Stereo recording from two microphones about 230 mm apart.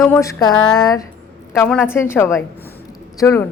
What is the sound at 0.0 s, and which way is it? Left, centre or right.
Speech, centre.